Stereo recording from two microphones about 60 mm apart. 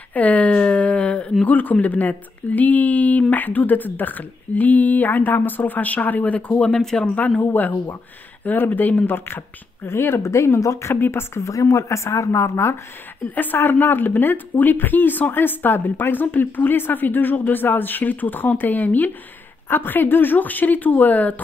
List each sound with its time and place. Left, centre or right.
0.1 s a sound: left
1.4 s speech: left
6.8 s speech: centre
7.2 s a woman's voice: left
11.5 s speech: left
13.3 s a woman's voice: left